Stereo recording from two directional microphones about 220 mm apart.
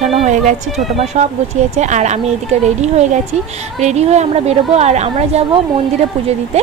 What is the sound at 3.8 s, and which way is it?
A woman's voice, 30° right (ahead or behind).